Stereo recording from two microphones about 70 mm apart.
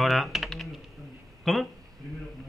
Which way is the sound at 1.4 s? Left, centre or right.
Centre.